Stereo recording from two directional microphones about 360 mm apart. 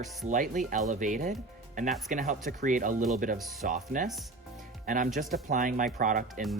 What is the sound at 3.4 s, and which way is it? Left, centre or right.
Speech, centre.